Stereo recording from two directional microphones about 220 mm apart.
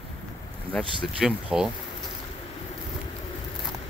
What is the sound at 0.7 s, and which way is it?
Speech, 25° right (ahead or behind).